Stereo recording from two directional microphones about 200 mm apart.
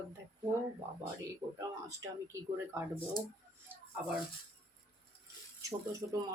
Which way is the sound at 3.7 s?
10° right (ahead or behind).